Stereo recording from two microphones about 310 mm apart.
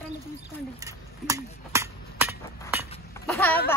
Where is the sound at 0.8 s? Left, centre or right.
Centre.